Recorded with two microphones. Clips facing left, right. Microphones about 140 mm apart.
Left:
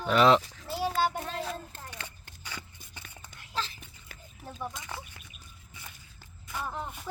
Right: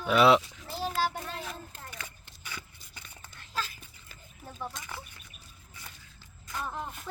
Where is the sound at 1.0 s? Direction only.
20° left (ahead or behind).